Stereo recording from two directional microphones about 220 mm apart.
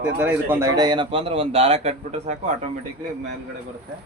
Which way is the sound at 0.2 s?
10° right (ahead or behind).